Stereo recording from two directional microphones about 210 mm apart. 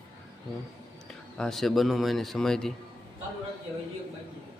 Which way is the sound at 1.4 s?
Centre (ahead or behind).